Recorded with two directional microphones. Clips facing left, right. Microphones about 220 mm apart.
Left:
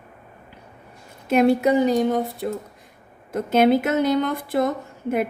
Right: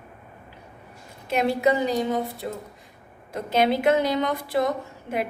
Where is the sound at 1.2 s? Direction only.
50° left (ahead or behind).